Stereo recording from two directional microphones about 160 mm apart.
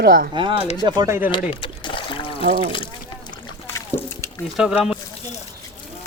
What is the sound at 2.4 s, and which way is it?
Speech, 45° right (ahead or behind).